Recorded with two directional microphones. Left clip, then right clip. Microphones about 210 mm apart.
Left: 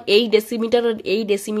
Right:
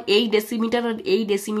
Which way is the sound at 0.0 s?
30° left (ahead or behind).